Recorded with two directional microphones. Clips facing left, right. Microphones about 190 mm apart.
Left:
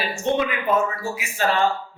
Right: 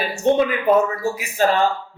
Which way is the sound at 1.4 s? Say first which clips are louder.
Right 5 dB; 45° right (ahead or behind).